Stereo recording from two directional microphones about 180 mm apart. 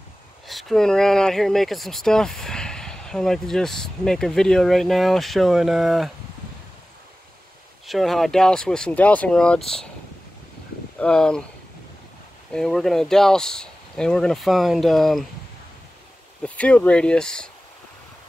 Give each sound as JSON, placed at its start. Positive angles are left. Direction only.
{"t": 0.5, "sound": "speech", "side_deg": 0}
{"t": 7.8, "sound": "speech", "side_deg": 0}
{"t": 11.0, "sound": "speech", "side_deg": 5}
{"t": 12.5, "sound": "speech", "side_deg": 0}
{"t": 16.4, "sound": "speech", "side_deg": 5}